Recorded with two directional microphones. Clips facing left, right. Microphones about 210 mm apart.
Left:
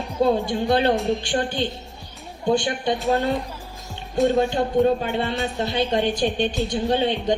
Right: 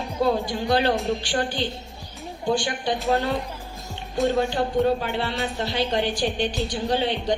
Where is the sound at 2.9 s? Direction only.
Centre (ahead or behind).